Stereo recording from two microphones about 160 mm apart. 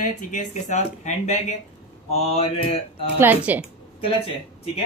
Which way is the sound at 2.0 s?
40° left (ahead or behind).